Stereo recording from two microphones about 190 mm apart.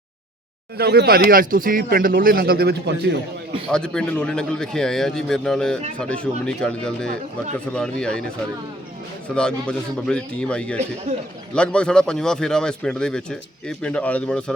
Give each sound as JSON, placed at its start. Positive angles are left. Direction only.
{"t": 0.8, "sound": "speech", "side_deg": -55}
{"t": 3.7, "sound": "a man's voice", "side_deg": 5}
{"t": 9.3, "sound": "a man's voice", "side_deg": 5}